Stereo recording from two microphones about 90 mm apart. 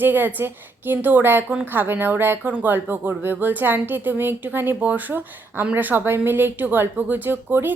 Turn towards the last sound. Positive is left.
turn(degrees=-20)  # may be behind; listen again after turning